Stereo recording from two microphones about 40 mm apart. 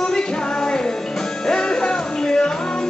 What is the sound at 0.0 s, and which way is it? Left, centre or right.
Music, centre.